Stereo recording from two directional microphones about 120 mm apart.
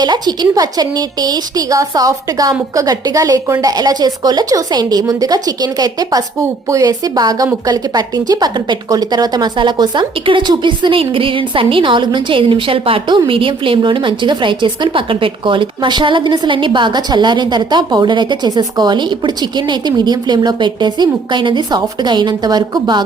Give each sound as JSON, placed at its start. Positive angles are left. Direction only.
{"t": 0.0, "sound": "a woman's voice", "side_deg": -35}